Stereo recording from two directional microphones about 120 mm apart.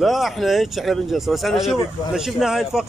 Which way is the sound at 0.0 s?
Centre (ahead or behind).